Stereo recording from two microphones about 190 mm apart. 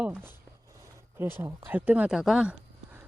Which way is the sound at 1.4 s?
10° right (ahead or behind).